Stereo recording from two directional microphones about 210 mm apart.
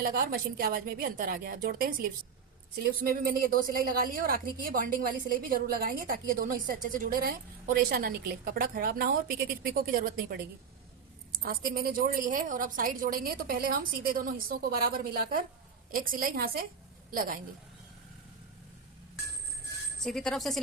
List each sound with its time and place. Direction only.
0.0 s a woman's voice: 45° right (ahead or behind)
20.1 s speech: centre (ahead or behind)